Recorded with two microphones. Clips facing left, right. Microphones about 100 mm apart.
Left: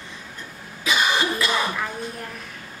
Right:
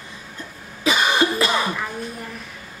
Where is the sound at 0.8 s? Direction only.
35° right (ahead or behind).